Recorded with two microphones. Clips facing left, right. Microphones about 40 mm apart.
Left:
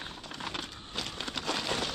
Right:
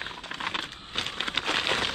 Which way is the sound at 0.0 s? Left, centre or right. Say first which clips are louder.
Right 6 dB; right.